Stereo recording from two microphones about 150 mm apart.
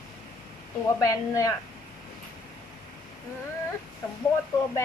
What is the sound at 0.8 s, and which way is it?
Speech, 25° left (ahead or behind).